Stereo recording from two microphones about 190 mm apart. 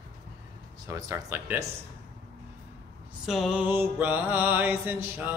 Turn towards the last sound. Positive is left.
turn(degrees=-10)  # may be behind; listen again after turning